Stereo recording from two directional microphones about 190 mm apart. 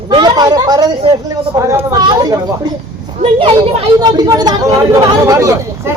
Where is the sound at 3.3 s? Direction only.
30° right (ahead or behind).